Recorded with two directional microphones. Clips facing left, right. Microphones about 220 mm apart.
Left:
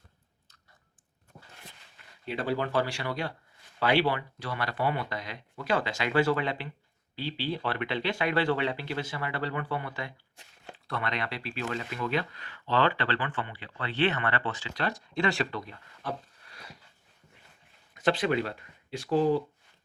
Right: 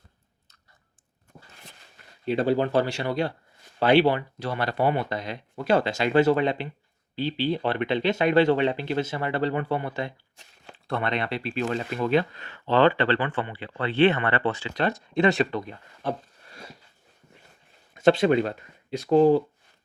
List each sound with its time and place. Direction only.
2.2 s speech: 25° right (ahead or behind)
14.4 s speech: 65° right (ahead or behind)
14.8 s speech: 20° right (ahead or behind)
17.9 s speech: 25° right (ahead or behind)